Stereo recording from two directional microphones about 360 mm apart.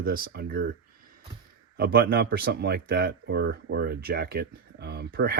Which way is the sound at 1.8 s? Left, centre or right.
Right.